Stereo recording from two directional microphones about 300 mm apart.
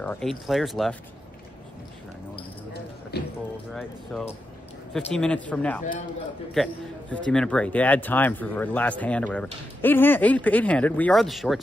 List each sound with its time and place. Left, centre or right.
0.0 s a man's voice: centre
3.1 s speech: left
3.7 s a man's voice: centre